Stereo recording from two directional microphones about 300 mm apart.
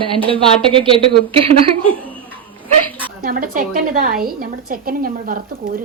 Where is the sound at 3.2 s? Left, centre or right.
Right.